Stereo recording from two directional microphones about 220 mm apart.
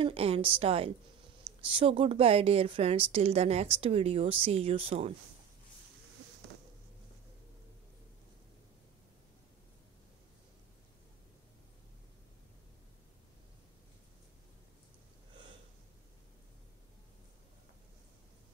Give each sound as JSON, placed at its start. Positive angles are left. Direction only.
{"t": 0.0, "sound": "a woman's voice", "side_deg": -25}